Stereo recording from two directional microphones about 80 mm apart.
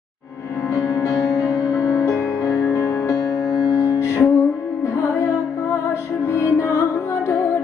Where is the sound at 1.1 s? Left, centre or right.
Centre.